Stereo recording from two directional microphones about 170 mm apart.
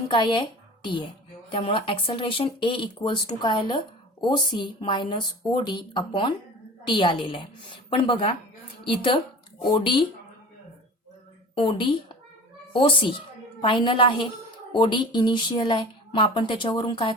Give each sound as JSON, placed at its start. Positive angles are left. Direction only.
{"t": 0.1, "sound": "speech", "side_deg": 25}
{"t": 11.5, "sound": "speech", "side_deg": 30}
{"t": 13.6, "sound": "speech", "side_deg": 30}